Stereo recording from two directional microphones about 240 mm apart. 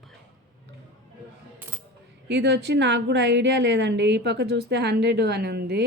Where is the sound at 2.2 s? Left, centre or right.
Right.